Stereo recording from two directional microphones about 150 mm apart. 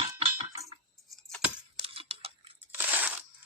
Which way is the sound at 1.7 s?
40° right (ahead or behind).